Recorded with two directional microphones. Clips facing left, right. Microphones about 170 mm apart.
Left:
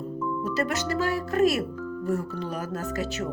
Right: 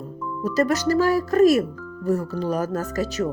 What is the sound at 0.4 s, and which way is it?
Speech, 40° right (ahead or behind).